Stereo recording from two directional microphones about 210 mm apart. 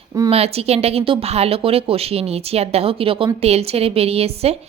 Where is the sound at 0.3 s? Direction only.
30° right (ahead or behind).